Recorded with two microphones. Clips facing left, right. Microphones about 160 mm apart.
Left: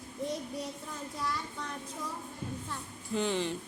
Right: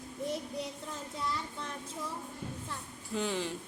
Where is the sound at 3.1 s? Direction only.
5° right (ahead or behind).